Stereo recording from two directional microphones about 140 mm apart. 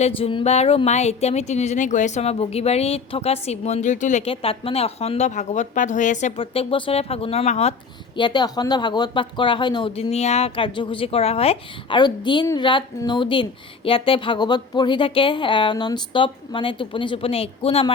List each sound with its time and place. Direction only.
0.0 s speech: 40° left (ahead or behind); by 4.2 s 60° left (ahead or behind)
4.3 s speech: 45° left (ahead or behind); by 6.3 s 60° left (ahead or behind)
6.3 s speech: 40° left (ahead or behind)